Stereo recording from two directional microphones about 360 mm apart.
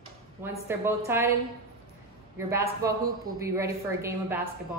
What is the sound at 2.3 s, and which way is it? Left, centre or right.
A woman's voice, centre.